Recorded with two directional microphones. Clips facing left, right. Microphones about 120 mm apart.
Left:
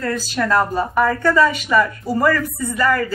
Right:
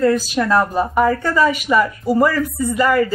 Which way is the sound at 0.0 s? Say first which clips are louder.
Right 6 dB; 15° right (ahead or behind).